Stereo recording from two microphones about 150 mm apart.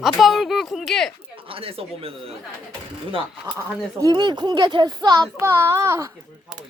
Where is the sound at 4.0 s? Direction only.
25° right (ahead or behind).